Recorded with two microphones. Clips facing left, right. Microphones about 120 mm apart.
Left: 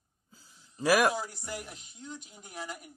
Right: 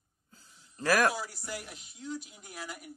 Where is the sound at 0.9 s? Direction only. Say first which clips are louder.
Left 2 dB; 15° left (ahead or behind).